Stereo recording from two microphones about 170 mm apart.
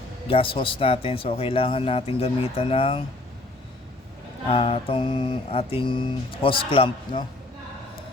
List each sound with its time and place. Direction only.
0.3 s mantra: 35° left (ahead or behind)
4.4 s mantra: 35° left (ahead or behind)